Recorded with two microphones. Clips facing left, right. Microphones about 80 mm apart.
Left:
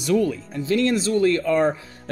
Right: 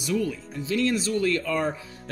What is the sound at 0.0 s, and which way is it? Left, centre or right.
Speech, left.